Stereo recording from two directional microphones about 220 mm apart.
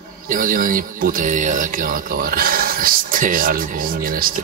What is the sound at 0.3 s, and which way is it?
Speech, 40° right (ahead or behind).